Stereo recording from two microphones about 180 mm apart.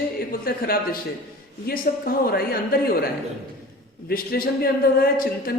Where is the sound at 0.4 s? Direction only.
55° left (ahead or behind).